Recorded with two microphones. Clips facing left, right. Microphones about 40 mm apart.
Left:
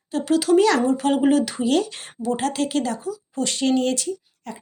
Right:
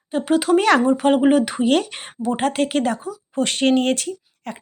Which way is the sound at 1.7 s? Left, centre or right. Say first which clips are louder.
Right 2 dB; right.